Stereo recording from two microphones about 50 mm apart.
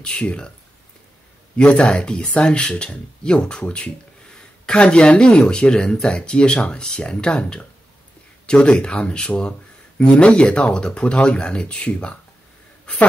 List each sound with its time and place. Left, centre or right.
0.0 s speech: centre
1.6 s speech: left